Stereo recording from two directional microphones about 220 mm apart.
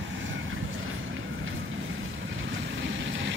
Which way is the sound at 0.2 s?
60° right (ahead or behind).